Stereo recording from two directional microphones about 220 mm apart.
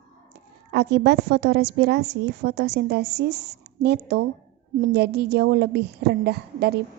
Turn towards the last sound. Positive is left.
turn(degrees=-50)  # may be behind; listen again after turning